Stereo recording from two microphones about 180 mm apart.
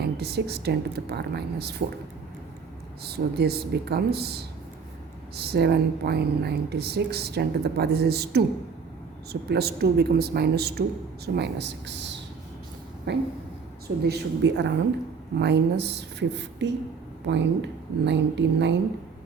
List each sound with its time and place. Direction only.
0.0 s speech: 65° right (ahead or behind)
3.0 s speech: 60° right (ahead or behind)
5.5 s speech: 65° right (ahead or behind)
13.1 s a sound: 80° right
13.8 s speech: 65° right (ahead or behind)